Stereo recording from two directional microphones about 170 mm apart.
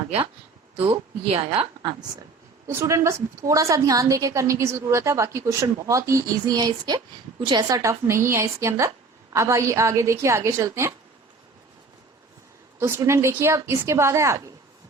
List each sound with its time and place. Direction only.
0.8 s a woman's voice: 35° right (ahead or behind)
2.6 s a woman's voice: 15° right (ahead or behind)
12.8 s a woman's voice: 15° right (ahead or behind)